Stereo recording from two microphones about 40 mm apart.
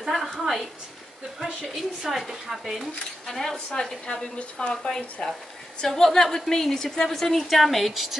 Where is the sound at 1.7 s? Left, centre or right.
Centre.